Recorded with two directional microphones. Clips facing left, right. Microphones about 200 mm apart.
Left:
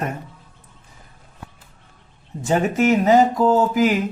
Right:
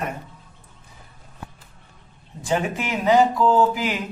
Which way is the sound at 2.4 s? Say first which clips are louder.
Left 7 dB; 45° left (ahead or behind).